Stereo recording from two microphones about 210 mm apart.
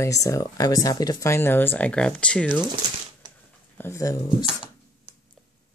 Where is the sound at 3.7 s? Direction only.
10° left (ahead or behind).